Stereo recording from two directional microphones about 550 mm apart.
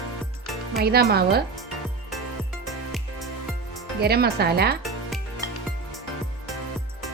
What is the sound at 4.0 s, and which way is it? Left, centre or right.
Speech, centre.